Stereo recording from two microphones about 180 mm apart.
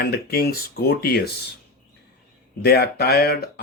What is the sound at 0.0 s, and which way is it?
Speech, 60° left (ahead or behind).